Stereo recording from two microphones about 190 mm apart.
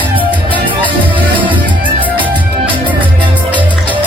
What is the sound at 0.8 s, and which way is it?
Music, 25° right (ahead or behind).